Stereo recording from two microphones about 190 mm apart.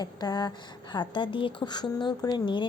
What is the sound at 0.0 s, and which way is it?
A woman's voice, 20° left (ahead or behind).